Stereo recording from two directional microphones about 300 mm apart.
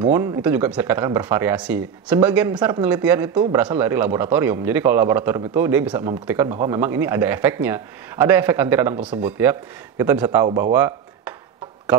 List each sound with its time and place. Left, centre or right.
0.0 s speech: centre